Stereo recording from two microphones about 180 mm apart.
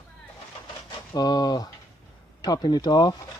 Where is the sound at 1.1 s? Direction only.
20° left (ahead or behind).